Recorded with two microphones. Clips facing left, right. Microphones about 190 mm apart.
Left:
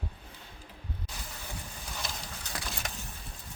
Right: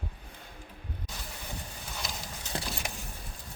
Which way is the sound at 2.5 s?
25° right (ahead or behind).